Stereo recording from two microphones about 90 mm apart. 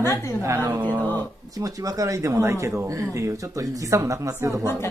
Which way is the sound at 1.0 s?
20° left (ahead or behind).